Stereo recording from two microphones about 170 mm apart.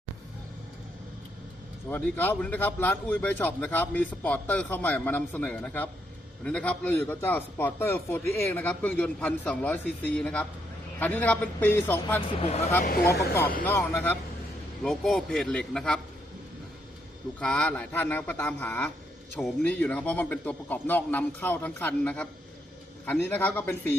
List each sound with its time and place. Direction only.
1.9 s a man's voice: 10° left (ahead or behind)
12.4 s speech: 40° left (ahead or behind)
13.7 s a man's voice: 15° left (ahead or behind)
14.8 s a man's voice: centre (ahead or behind)
17.4 s a man's voice: 5° left (ahead or behind)